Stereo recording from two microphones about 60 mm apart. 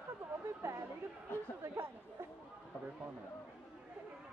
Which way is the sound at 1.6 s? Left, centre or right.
Right.